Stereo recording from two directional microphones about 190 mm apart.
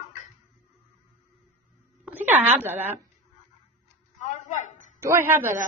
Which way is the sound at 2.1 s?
10° right (ahead or behind).